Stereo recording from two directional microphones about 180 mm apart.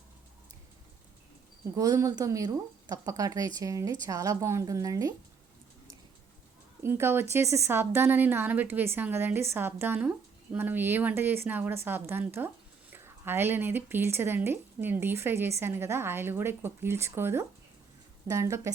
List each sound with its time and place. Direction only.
1.7 s speech: 20° right (ahead or behind)
6.8 s speech: 15° right (ahead or behind)